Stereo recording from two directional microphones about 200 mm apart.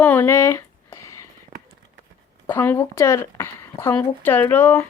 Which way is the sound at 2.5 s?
10° left (ahead or behind).